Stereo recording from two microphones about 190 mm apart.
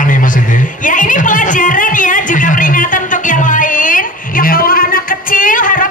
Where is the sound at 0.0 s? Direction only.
45° left (ahead or behind).